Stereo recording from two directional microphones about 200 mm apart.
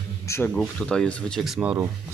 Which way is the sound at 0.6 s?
5° left (ahead or behind).